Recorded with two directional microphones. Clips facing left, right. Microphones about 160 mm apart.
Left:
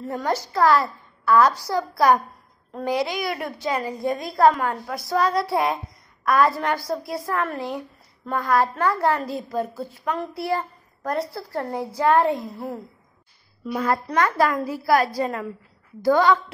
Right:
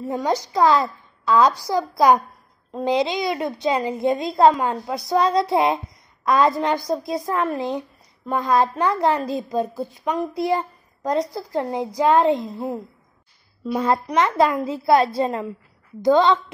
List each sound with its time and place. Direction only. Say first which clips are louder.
0.0 s a child's voice: right 3 dB; 15° right (ahead or behind)